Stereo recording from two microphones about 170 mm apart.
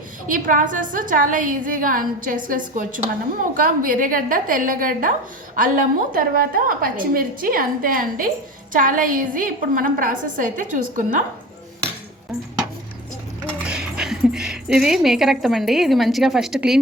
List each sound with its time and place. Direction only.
0.3 s a woman's voice: 50° right (ahead or behind)
13.7 s speech: 5° right (ahead or behind)